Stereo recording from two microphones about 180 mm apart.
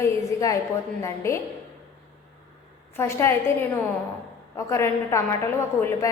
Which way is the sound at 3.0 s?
15° left (ahead or behind).